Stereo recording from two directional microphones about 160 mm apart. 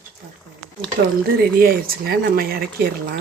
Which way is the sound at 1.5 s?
70° right (ahead or behind).